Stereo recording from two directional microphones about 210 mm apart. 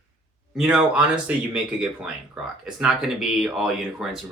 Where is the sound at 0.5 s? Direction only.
5° right (ahead or behind).